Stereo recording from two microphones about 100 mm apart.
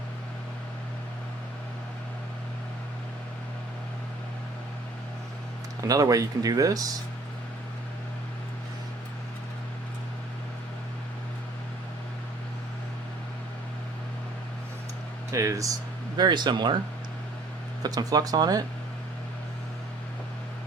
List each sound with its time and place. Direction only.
5.9 s speech: 35° right (ahead or behind)
15.3 s speech: 30° right (ahead or behind)
16.1 s speech: 45° right (ahead or behind)
17.8 s speech: 40° right (ahead or behind)